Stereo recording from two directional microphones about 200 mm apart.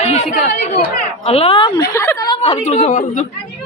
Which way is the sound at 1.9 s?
15° left (ahead or behind).